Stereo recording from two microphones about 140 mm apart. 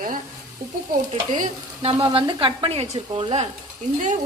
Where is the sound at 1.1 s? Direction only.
55° right (ahead or behind).